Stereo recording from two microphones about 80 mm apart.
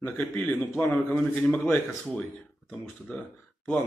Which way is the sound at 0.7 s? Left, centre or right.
Left.